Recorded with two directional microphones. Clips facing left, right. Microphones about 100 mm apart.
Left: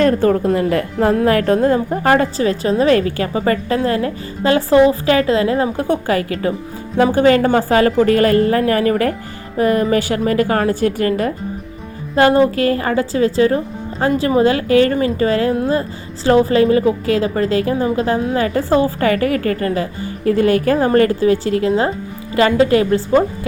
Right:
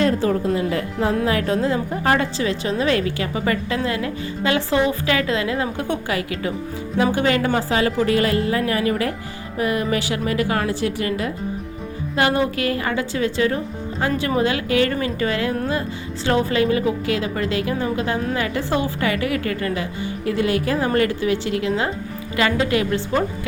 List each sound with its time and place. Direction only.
0.0 s a woman's voice: 50° left (ahead or behind); by 23.5 s 35° left (ahead or behind)